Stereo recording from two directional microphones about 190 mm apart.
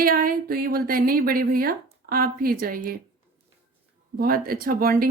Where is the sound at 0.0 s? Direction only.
50° right (ahead or behind).